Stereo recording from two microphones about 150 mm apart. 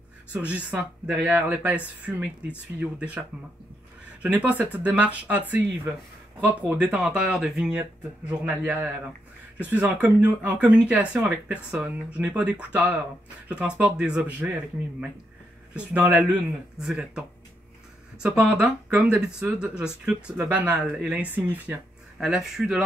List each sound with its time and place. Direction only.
0.3 s speech: 10° right (ahead or behind)
15.7 s speech: 5° right (ahead or behind)
16.0 s speech: 20° right (ahead or behind)
16.8 s speech: 5° right (ahead or behind)
18.2 s speech: 5° right (ahead or behind)